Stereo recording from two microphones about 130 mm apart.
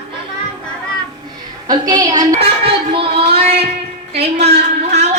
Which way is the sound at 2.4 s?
45° right (ahead or behind).